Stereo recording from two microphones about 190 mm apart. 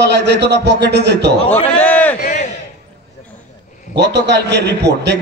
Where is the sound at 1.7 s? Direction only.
10° left (ahead or behind).